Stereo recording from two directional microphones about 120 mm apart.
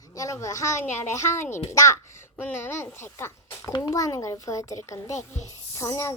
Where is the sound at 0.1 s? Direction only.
30° left (ahead or behind).